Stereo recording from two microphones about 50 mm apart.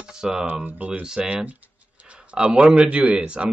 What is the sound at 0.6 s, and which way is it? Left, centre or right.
Speech, right.